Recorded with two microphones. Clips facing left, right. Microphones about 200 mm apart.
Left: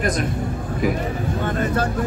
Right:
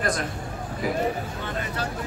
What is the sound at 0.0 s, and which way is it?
Speech, 20° left (ahead or behind).